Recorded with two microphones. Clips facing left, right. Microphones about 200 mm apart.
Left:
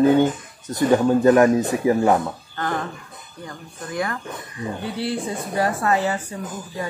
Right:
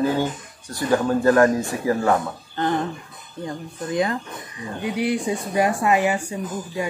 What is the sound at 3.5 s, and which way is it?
Speech, 20° right (ahead or behind).